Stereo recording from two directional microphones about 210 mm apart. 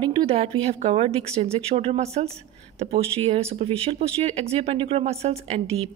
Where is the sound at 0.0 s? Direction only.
25° right (ahead or behind).